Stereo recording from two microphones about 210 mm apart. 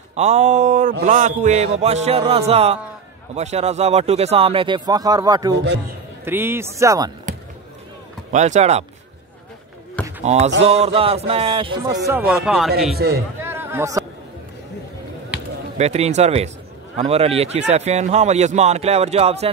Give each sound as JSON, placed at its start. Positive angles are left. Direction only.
{"t": 0.1, "sound": "speech", "side_deg": -30}
{"t": 8.3, "sound": "speech", "side_deg": -35}
{"t": 10.2, "sound": "speech", "side_deg": -30}
{"t": 12.9, "sound": "a man's voice", "side_deg": -45}
{"t": 13.4, "sound": "a sound", "side_deg": -10}
{"t": 15.8, "sound": "speech", "side_deg": -30}